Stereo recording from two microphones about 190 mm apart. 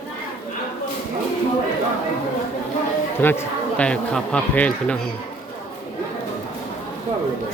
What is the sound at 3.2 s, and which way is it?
Speech, 10° left (ahead or behind).